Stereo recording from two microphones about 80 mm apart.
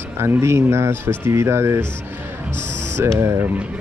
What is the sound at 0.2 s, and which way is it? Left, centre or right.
Speech, right.